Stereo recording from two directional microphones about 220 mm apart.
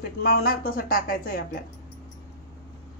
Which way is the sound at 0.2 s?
45° left (ahead or behind).